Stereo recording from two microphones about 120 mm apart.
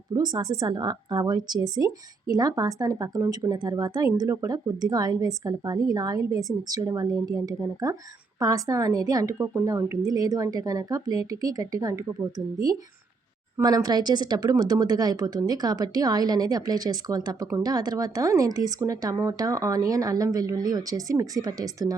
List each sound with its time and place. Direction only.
0.1 s a woman's voice: 35° right (ahead or behind)